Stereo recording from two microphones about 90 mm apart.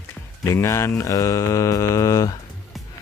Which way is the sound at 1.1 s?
40° left (ahead or behind).